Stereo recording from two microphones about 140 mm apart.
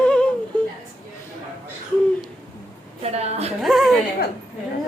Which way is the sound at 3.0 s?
50° right (ahead or behind).